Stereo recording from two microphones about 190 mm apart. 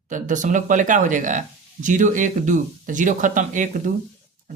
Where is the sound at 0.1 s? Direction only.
40° right (ahead or behind).